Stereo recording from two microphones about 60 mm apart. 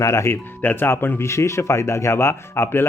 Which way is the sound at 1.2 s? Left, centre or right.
Left.